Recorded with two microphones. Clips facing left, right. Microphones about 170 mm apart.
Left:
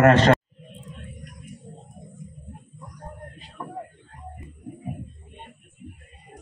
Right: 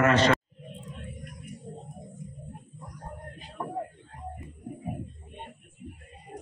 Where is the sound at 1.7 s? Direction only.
30° right (ahead or behind).